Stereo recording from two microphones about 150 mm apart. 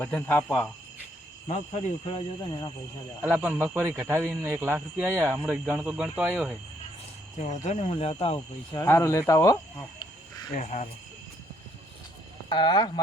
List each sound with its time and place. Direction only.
0.0 s speech: 10° left (ahead or behind)
1.5 s speech: 50° left (ahead or behind); by 2.7 s 30° left (ahead or behind)
3.2 s speech: 10° right (ahead or behind)
7.3 s speech: 50° left (ahead or behind)
8.7 s speech: 20° left (ahead or behind)
10.5 s speech: 55° left (ahead or behind)
12.5 s speech: 30° left (ahead or behind)